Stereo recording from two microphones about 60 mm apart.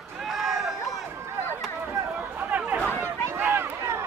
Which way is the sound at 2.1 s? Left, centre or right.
Right.